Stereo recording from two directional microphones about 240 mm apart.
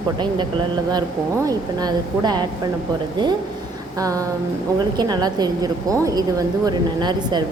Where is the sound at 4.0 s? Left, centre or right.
Centre.